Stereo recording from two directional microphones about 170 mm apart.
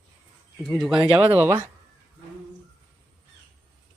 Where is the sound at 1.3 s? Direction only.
15° right (ahead or behind).